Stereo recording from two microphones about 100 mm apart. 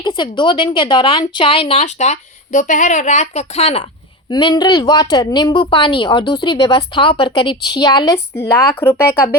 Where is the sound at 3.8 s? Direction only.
50° left (ahead or behind).